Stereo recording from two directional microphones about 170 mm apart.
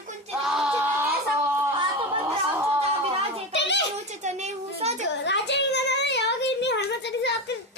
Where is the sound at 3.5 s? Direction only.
90° left.